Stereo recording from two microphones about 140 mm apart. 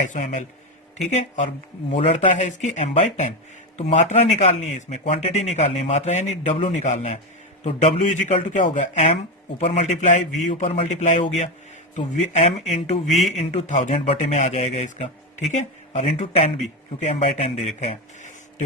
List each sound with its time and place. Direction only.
0.0 s speech: 60° left (ahead or behind)
9.6 s speech: 55° left (ahead or behind)
13.1 s speech: centre (ahead or behind)
13.3 s speech: 55° left (ahead or behind)